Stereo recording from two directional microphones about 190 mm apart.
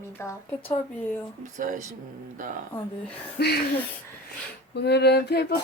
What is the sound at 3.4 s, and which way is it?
Speech, 55° left (ahead or behind).